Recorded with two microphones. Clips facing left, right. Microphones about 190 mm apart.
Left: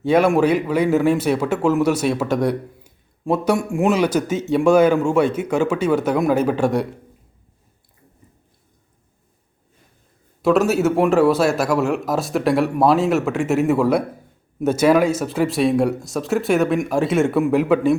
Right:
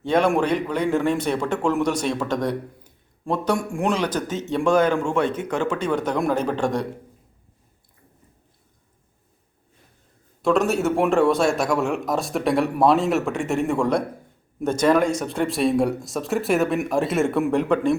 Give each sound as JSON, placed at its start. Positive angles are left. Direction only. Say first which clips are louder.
{"t": 0.0, "sound": "speech", "louder": "left 4 dB", "side_deg": 5}
{"t": 10.4, "sound": "speech", "louder": "left 4 dB", "side_deg": 5}